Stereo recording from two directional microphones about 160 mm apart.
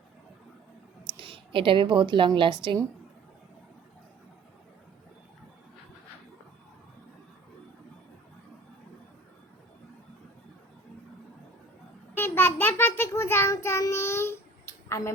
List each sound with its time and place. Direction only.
1.1 s a woman's voice: 35° right (ahead or behind)
12.1 s child singing: 15° left (ahead or behind)
14.8 s a sound: 15° left (ahead or behind)